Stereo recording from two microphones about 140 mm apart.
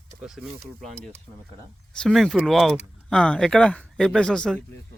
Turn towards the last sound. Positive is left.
turn(degrees=5)  # may be behind; listen again after turning